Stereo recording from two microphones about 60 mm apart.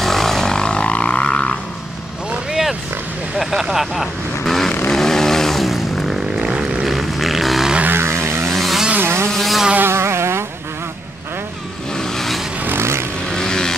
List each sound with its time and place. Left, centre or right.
0.0 s didgeridoo: centre
3.3 s vehicle: centre
6.4 s vehicle: centre
6.9 s a sound: centre
7.8 s vehicle: right
8.5 s vehicle: centre
9.0 s vehicle: right
9.3 s vehicle: centre
9.8 s vehicle: right
12.0 s vehicle: centre
12.6 s vehicle: right
13.3 s vehicle: centre